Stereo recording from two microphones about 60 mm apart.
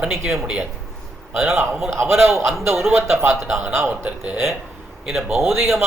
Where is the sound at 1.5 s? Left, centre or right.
Right.